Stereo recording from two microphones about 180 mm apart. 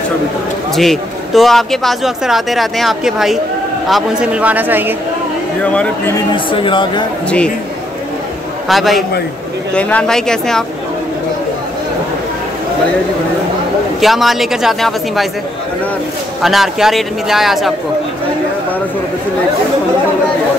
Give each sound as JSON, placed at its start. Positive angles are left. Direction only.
{"t": 0.7, "sound": "speech", "side_deg": 0}
{"t": 5.6, "sound": "speech", "side_deg": 5}
{"t": 6.3, "sound": "speech", "side_deg": 25}
{"t": 8.6, "sound": "speech", "side_deg": 0}
{"t": 14.0, "sound": "speech", "side_deg": 0}
{"t": 16.4, "sound": "speech", "side_deg": 0}